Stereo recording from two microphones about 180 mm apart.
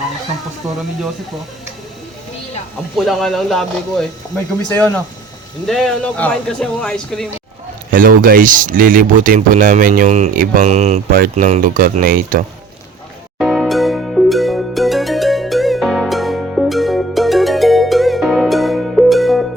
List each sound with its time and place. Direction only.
2.9 s speech: centre (ahead or behind)
5.6 s speech: centre (ahead or behind)
7.9 s speech: 50° right (ahead or behind)
11.1 s speech: 50° right (ahead or behind)
13.4 s music: centre (ahead or behind)